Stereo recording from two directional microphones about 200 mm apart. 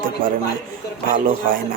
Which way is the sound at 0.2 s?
45° right (ahead or behind).